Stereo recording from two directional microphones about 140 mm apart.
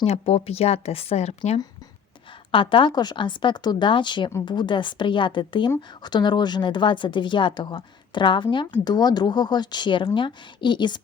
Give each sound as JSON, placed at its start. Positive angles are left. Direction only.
{"t": 0.0, "sound": "speech", "side_deg": 45}
{"t": 2.5, "sound": "a woman's voice", "side_deg": 40}